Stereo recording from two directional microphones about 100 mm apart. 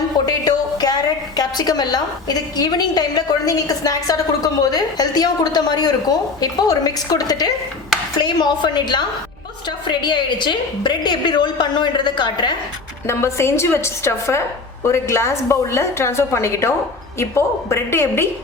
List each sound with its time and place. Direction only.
0.3 s music: 40° left (ahead or behind)
1.4 s a woman's voice: 40° left (ahead or behind)
13.1 s a woman's voice: 25° left (ahead or behind)